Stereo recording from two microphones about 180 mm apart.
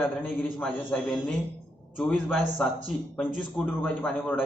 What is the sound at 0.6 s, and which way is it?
A man's voice, 5° left (ahead or behind).